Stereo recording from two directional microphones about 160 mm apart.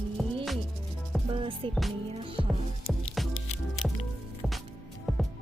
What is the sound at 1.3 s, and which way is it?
Music, 35° right (ahead or behind).